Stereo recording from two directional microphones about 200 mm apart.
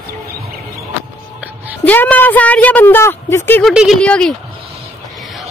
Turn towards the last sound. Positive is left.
turn(degrees=5)  # may be behind; listen again after turning